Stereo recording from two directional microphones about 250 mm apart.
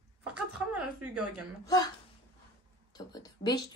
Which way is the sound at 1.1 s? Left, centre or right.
Right.